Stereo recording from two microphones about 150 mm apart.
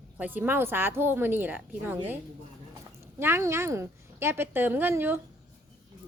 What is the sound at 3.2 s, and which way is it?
A woman's voice, 15° right (ahead or behind).